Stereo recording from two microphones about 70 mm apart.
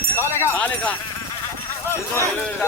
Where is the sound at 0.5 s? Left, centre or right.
Left.